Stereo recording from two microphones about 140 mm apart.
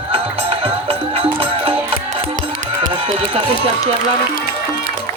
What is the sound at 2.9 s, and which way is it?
Run, 45° right (ahead or behind).